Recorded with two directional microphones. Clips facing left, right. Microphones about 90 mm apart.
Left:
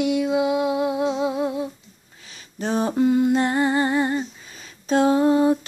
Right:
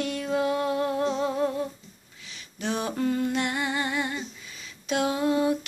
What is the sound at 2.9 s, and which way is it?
Humming, 20° left (ahead or behind).